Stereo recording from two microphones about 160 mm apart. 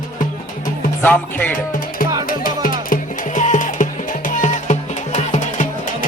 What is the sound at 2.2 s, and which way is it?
Music, 60° left (ahead or behind).